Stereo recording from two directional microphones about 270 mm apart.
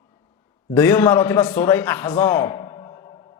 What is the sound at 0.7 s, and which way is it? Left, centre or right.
A man's voice, centre.